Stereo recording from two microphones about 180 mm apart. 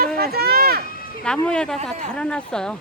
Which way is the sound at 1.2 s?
5° left (ahead or behind).